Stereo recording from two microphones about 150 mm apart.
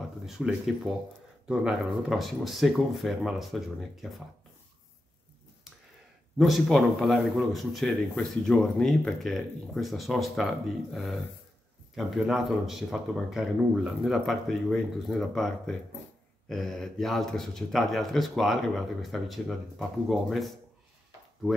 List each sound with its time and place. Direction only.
0.4 s a man's voice: 5° right (ahead or behind)
6.3 s a man's voice: centre (ahead or behind)